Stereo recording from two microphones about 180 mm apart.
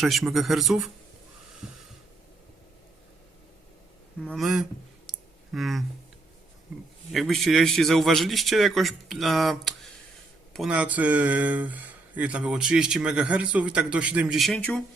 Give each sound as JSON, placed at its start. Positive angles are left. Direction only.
{"t": 0.0, "sound": "a man's voice", "side_deg": 0}
{"t": 1.6, "sound": "snort", "side_deg": -5}
{"t": 4.2, "sound": "a man's voice", "side_deg": 0}
{"t": 5.0, "sound": "clicking", "side_deg": 0}
{"t": 7.1, "sound": "a man's voice", "side_deg": 0}